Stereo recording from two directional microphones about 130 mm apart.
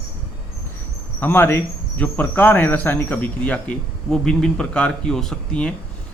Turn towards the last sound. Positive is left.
turn(degrees=5)  # may be behind; listen again after turning